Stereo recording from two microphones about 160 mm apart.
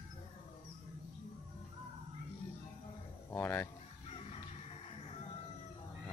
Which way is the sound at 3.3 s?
10° left (ahead or behind).